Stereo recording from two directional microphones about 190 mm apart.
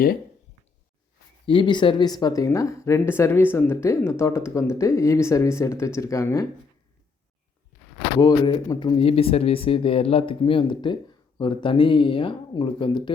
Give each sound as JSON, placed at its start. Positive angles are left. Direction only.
{"t": 1.5, "sound": "speech", "side_deg": 25}
{"t": 8.2, "sound": "speech", "side_deg": 20}